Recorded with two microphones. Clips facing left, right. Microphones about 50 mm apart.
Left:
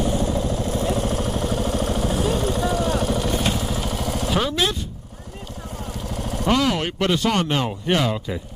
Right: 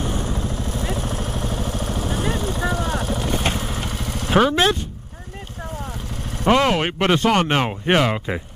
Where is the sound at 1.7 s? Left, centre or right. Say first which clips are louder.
Left 3 dB; left.